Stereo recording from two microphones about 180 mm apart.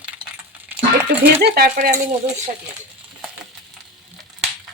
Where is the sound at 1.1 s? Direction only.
55° right (ahead or behind).